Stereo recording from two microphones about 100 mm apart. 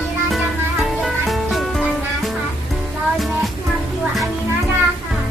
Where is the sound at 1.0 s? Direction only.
Centre (ahead or behind).